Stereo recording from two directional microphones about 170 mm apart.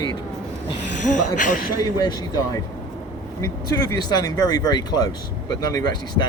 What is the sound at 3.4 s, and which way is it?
Speech, 20° left (ahead or behind).